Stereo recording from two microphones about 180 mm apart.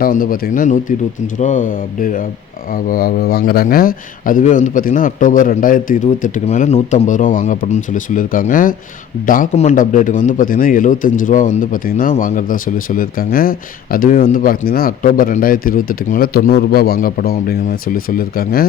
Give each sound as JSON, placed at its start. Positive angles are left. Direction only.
{"t": 0.0, "sound": "a man's voice", "side_deg": 50}